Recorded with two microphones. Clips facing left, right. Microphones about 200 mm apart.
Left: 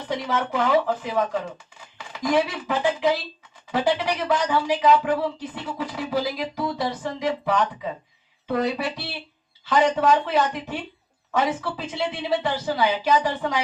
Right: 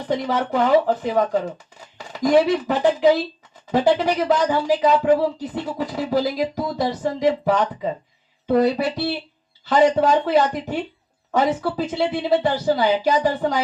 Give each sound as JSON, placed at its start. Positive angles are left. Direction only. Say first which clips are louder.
{"t": 0.1, "sound": "a woman's voice", "louder": "right 4 dB", "side_deg": -40}